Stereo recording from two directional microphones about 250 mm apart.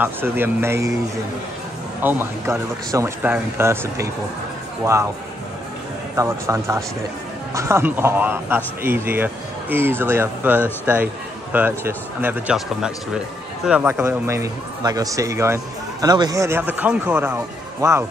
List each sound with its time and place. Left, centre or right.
0.0 s speech: centre
2.0 s speech: centre
6.1 s speech: centre